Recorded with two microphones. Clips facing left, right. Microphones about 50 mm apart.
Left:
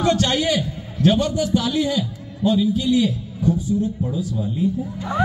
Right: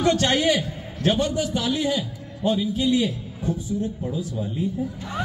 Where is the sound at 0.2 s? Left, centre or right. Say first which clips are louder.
Even; right.